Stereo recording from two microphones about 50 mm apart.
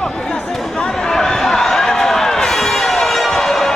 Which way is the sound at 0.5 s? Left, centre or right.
Centre.